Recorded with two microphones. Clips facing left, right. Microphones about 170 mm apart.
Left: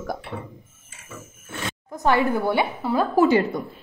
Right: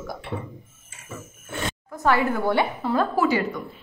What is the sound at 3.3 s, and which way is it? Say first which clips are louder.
Speech: left 4 dB; 30° left (ahead or behind).